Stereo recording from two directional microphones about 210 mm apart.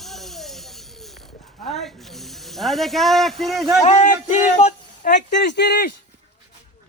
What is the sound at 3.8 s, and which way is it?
Speech, 35° left (ahead or behind).